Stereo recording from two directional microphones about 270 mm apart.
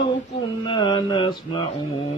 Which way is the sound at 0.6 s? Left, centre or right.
Centre.